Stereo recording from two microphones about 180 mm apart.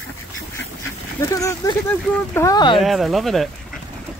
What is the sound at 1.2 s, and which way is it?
Speech, 15° left (ahead or behind).